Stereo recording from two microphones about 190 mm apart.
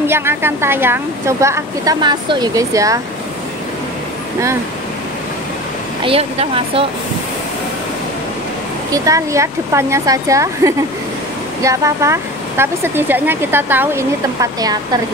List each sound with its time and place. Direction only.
0.0 s speech: 10° right (ahead or behind)
6.0 s speech: 30° right (ahead or behind)
8.9 s speech: 15° right (ahead or behind)